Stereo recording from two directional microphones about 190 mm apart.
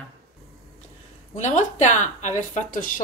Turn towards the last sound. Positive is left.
turn(degrees=45)  # may be behind; listen again after turning